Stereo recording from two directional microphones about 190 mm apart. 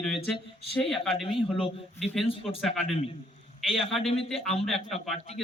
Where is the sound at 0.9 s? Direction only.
Centre (ahead or behind).